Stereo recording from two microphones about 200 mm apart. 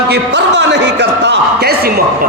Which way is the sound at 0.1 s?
60° right (ahead or behind).